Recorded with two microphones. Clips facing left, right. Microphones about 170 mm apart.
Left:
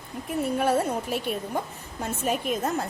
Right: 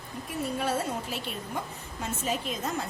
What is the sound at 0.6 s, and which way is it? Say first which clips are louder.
A woman's voice: left 6 dB; 50° left (ahead or behind).